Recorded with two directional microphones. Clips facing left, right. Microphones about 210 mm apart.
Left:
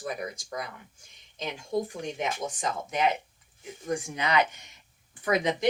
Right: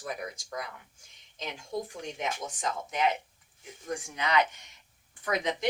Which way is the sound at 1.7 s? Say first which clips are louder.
Left 6 dB; 25° left (ahead or behind).